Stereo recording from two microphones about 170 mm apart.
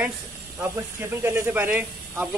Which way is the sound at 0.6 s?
15° right (ahead or behind).